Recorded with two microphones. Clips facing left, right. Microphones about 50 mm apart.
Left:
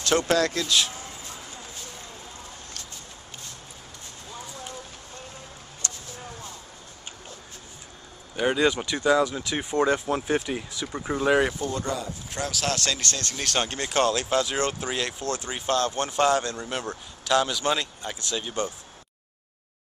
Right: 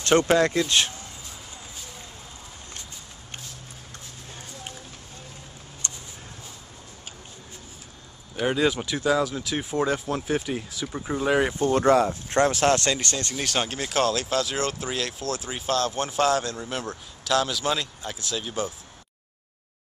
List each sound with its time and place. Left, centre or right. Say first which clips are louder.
0.3 s speech: right 3 dB; right
0.7 s speech: right 1 dB; right
5.8 s a sound: left 1 dB; right
8.4 s speech: left 1 dB; centre
11.7 s speech: right 11 dB; right
12.3 s speech: right 6 dB; right
12.9 s speech: right 2 dB; centre